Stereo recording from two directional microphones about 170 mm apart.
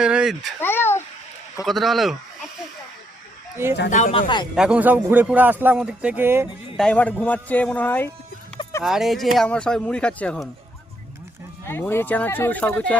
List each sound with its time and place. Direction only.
0.0 s speech: 5° right (ahead or behind)
0.6 s a sound: 15° left (ahead or behind)
1.6 s speech: centre (ahead or behind)
3.8 s speech: 45° left (ahead or behind)
4.1 s speech: 25° left (ahead or behind)
4.5 s speech: 5° right (ahead or behind)
6.7 s speech: 5° left (ahead or behind)
8.8 s speech: centre (ahead or behind)
11.6 s speech: 15° left (ahead or behind)